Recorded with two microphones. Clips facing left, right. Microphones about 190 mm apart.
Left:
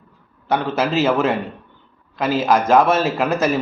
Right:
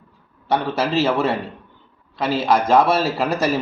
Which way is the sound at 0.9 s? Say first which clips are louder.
Left 1 dB; 30° right (ahead or behind).